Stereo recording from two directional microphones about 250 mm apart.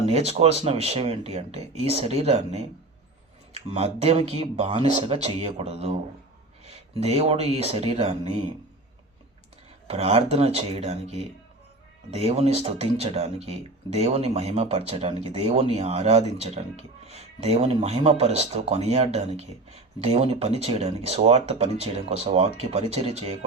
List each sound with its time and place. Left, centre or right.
0.0 s speech: right
7.0 s speech: right
9.8 s speech: right